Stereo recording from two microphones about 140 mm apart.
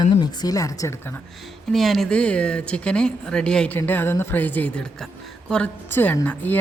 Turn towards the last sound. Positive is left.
turn(degrees=10)  # may be behind; listen again after turning